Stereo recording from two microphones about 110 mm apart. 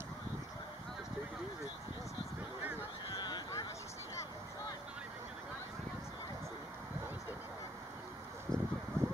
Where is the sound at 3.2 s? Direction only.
40° left (ahead or behind).